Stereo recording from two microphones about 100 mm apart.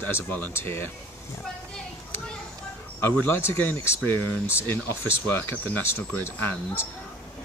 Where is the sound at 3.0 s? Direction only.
20° left (ahead or behind).